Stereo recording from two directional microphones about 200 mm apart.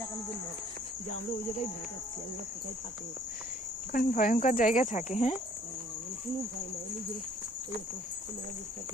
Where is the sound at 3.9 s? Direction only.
45° left (ahead or behind).